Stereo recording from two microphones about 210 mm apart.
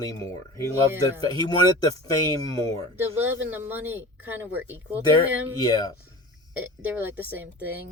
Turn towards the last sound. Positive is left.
turn(degrees=-10)  # may be behind; listen again after turning